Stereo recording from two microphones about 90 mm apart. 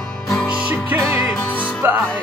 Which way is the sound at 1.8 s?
20° right (ahead or behind).